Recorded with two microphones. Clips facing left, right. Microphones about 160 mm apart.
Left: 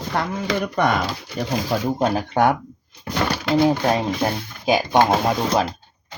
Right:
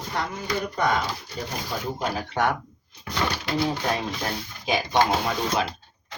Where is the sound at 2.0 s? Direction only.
45° left (ahead or behind).